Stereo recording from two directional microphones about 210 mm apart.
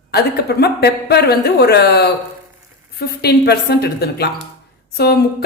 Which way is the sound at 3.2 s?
50° left (ahead or behind).